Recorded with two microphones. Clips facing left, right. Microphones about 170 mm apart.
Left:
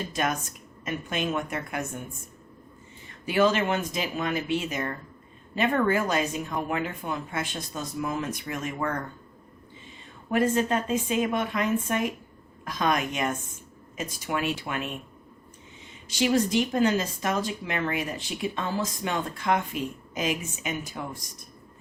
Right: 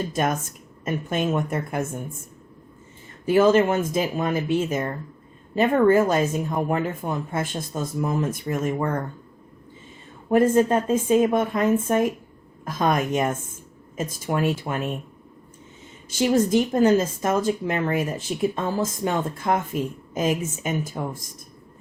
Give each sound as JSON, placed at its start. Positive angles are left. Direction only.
{"t": 0.1, "sound": "speech", "side_deg": -50}
{"t": 3.2, "sound": "speech", "side_deg": -45}
{"t": 10.2, "sound": "speech", "side_deg": -50}
{"t": 16.0, "sound": "speech", "side_deg": -50}